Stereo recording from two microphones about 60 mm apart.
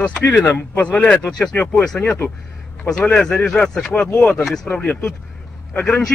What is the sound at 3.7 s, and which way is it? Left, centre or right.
Speech, centre.